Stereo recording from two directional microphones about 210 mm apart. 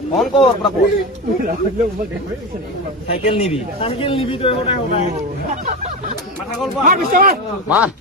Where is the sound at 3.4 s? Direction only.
30° left (ahead or behind).